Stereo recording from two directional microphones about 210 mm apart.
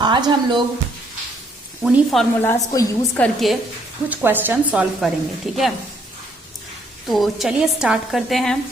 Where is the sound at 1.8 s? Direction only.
Centre (ahead or behind).